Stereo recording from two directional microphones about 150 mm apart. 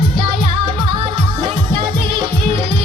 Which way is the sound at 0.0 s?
30° right (ahead or behind).